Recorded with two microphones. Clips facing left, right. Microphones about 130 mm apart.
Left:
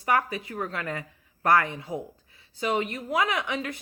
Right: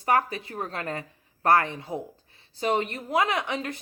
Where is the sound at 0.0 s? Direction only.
35° right (ahead or behind).